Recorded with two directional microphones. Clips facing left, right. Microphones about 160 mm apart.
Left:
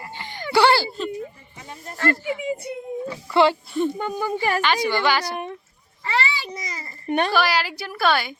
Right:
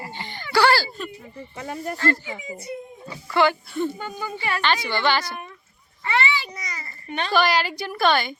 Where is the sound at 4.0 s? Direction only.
45° left (ahead or behind).